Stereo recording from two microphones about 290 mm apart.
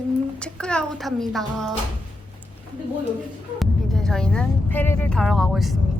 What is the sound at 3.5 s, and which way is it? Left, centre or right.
Speech, centre.